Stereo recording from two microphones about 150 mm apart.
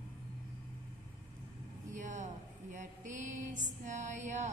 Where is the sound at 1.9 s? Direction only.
55° right (ahead or behind).